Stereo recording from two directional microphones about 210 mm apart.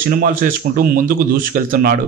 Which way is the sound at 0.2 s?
40° right (ahead or behind).